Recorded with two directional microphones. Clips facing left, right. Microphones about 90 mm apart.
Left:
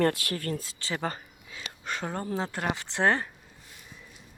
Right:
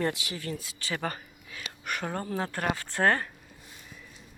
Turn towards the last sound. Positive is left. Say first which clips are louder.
# even
turn(degrees=15)  # may be behind; listen again after turning